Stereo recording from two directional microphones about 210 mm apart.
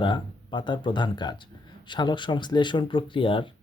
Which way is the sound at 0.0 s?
20° left (ahead or behind).